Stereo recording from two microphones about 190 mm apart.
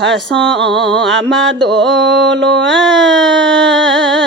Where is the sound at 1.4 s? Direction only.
75° right (ahead or behind).